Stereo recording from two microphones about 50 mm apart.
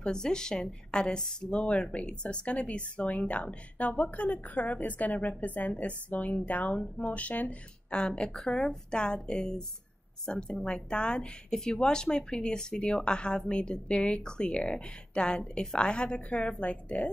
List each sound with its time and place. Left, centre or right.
0.0 s a woman's voice: centre
7.9 s a woman's voice: centre